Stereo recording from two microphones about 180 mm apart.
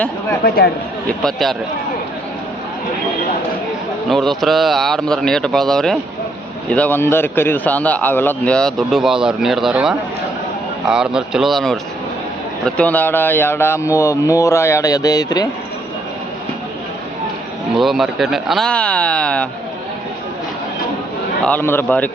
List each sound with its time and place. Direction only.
0.4 s speech: 55° left (ahead or behind)
1.0 s speech: centre (ahead or behind)
4.1 s speech: centre (ahead or behind); by 15.4 s 20° left (ahead or behind)
17.7 s speech: centre (ahead or behind)
21.4 s speech: 10° left (ahead or behind)